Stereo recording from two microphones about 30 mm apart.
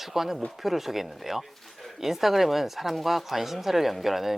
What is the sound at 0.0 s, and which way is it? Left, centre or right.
A woman's voice, centre.